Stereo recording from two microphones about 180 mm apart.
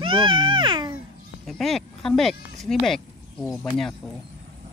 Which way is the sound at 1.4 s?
Centre (ahead or behind).